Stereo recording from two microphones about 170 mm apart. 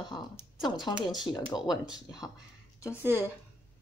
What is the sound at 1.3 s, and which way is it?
Speech, 25° left (ahead or behind).